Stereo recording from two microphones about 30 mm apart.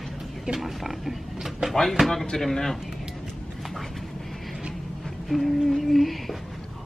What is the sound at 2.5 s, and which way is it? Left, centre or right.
Speech, centre.